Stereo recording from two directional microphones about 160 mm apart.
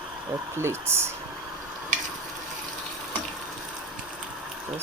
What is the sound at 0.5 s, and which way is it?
Speech, 15° right (ahead or behind).